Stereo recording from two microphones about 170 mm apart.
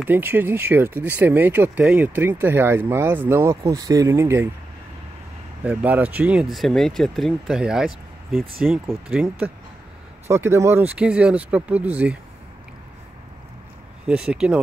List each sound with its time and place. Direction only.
0.0 s speech: 10° right (ahead or behind)
5.6 s speech: 10° right (ahead or behind)
10.3 s speech: 15° right (ahead or behind)
14.0 s speech: 5° right (ahead or behind)